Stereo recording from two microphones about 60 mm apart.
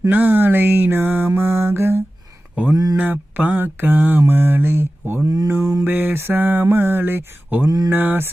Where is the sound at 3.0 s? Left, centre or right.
Right.